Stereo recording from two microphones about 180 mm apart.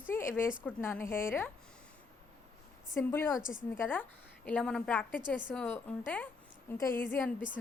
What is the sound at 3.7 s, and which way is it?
A woman's voice, 10° left (ahead or behind).